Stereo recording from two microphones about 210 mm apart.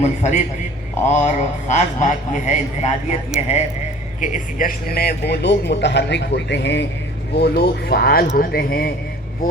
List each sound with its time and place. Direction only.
0.0 s a man's voice: 35° left (ahead or behind)